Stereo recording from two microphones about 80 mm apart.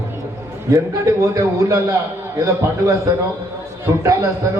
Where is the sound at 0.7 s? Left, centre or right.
Right.